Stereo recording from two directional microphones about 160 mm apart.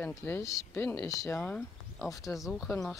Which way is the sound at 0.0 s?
15° left (ahead or behind).